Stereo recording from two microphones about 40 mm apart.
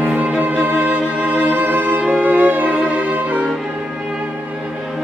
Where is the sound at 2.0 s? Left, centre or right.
Right.